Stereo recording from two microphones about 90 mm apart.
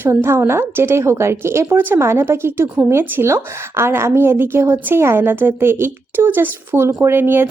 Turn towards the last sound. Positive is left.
turn(degrees=-25)  # may be behind; listen again after turning